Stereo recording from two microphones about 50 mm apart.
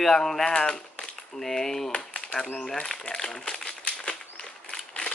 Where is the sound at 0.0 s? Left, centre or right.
Centre.